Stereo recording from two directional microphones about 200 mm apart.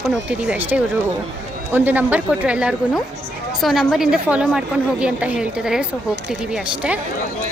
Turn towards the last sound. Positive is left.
turn(degrees=-5)  # may be behind; listen again after turning